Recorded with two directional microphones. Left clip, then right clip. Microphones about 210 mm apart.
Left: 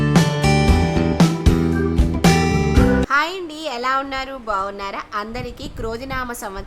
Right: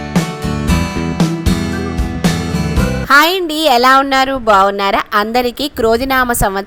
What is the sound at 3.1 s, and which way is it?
Speech, 30° right (ahead or behind).